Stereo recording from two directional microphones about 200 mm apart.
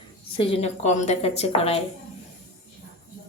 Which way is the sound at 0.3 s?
30° left (ahead or behind).